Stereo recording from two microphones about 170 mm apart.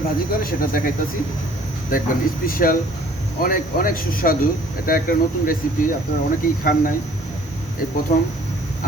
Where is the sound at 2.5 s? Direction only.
55° left (ahead or behind).